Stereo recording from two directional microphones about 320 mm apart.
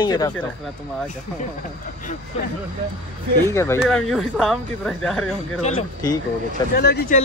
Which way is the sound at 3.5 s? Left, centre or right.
Centre.